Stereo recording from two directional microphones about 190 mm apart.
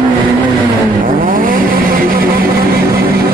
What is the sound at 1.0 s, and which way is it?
Vehicle, 45° right (ahead or behind).